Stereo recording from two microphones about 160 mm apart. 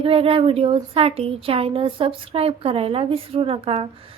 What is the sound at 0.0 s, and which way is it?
A woman's voice, 35° right (ahead or behind).